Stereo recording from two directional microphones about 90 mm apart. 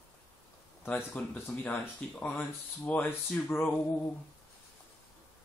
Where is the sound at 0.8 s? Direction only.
20° left (ahead or behind).